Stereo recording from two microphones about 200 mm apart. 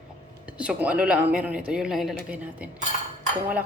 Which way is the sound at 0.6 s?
5° right (ahead or behind).